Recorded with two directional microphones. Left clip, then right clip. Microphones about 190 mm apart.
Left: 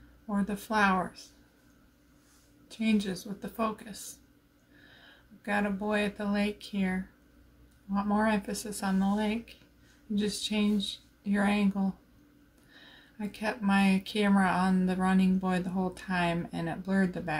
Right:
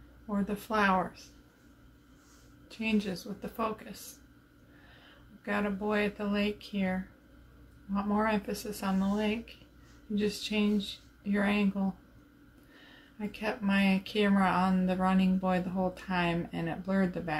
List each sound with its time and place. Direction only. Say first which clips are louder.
0.5 s speech: left 1 dB; 15° left (ahead or behind)
2.8 s speech: left 1 dB; 15° left (ahead or behind)
5.4 s speech: left 2 dB; 15° left (ahead or behind)
13.4 s speech: left 2 dB; 15° left (ahead or behind)